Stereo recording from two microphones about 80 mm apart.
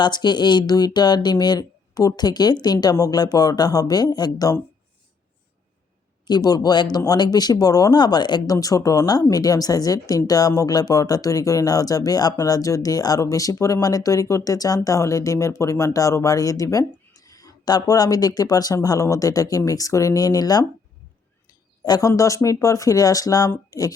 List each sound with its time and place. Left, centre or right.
0.0 s speech: left
6.2 s speech: left
8.4 s speech: left
21.8 s speech: left